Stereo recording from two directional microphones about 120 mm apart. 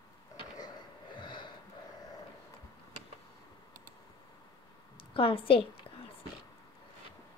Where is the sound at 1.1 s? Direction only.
40° left (ahead or behind).